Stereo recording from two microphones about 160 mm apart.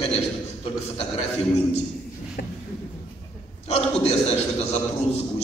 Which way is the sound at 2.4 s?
70° left (ahead or behind).